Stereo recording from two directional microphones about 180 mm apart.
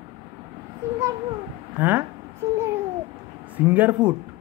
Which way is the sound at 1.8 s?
10° right (ahead or behind).